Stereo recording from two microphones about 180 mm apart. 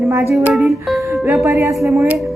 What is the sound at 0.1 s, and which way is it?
Speech, 15° right (ahead or behind).